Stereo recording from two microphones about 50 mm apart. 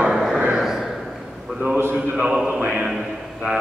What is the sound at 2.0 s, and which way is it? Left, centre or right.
Speech, centre.